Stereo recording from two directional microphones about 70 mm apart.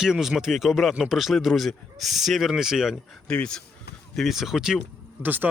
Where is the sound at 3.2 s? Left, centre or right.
Centre.